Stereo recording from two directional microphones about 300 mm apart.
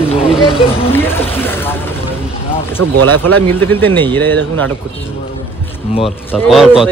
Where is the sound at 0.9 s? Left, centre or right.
Centre.